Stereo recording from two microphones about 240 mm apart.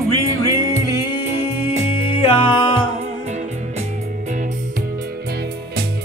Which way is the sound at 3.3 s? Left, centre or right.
Right.